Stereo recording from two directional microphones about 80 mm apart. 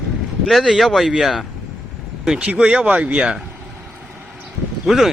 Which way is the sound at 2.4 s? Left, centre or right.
Centre.